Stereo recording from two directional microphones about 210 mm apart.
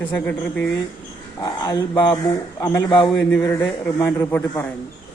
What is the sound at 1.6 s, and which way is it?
Speech, 20° left (ahead or behind).